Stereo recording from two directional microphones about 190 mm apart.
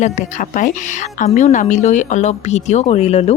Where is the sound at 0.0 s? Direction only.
40° left (ahead or behind).